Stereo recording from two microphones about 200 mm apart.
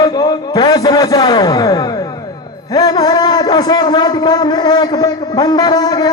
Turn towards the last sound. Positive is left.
turn(degrees=20)  # may be behind; listen again after turning